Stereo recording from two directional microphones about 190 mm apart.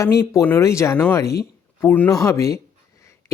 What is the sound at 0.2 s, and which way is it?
Speech, 15° left (ahead or behind).